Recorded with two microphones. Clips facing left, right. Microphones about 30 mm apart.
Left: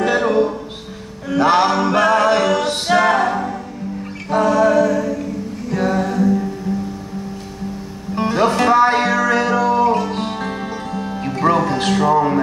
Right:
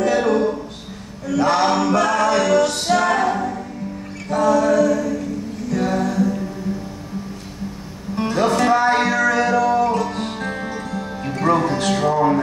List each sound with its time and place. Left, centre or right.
0.0 s music: left
4.3 s a capella: left
5.7 s music: left
8.4 s music: left
10.4 s music: centre